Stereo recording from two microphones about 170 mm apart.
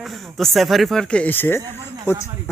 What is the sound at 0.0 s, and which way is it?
Speech, centre (ahead or behind).